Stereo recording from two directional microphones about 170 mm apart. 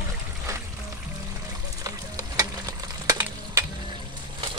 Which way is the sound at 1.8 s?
20° right (ahead or behind).